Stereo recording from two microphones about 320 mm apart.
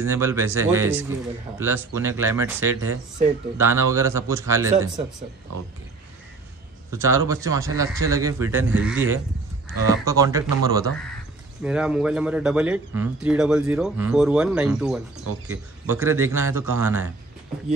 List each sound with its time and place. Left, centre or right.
0.0 s speech: centre
6.9 s speech: centre